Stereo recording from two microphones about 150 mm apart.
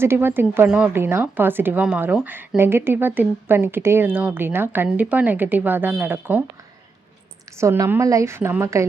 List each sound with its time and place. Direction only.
0.0 s a woman's voice: 15° right (ahead or behind)
7.6 s a woman's voice: 15° right (ahead or behind)